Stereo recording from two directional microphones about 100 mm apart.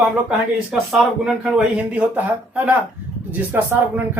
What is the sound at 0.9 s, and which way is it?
A man's voice, 5° right (ahead or behind).